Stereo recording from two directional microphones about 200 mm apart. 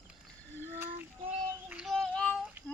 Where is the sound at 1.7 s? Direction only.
Centre (ahead or behind).